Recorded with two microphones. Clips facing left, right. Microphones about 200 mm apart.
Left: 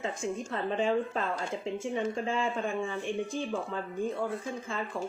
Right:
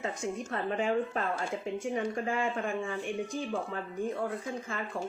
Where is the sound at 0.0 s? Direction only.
25° left (ahead or behind).